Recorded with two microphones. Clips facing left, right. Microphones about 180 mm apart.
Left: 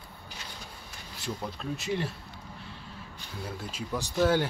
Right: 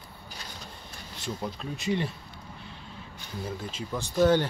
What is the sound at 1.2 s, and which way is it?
Speech, centre (ahead or behind).